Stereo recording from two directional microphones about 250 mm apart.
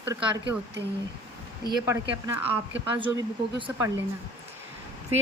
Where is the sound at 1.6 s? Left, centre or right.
Centre.